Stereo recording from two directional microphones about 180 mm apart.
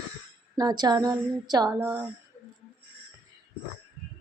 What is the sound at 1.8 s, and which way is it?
Speech, 10° right (ahead or behind).